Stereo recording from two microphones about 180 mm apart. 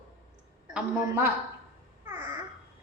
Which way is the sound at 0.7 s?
5° right (ahead or behind).